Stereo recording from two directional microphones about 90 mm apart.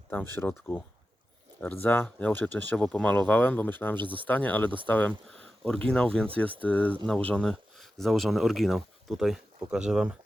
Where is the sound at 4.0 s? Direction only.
65° right (ahead or behind).